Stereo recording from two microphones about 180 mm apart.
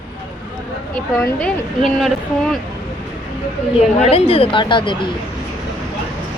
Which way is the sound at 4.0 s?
35° left (ahead or behind).